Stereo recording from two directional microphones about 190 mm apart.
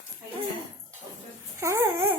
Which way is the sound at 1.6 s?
15° right (ahead or behind).